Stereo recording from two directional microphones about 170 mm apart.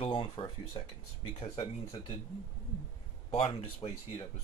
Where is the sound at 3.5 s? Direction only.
35° left (ahead or behind).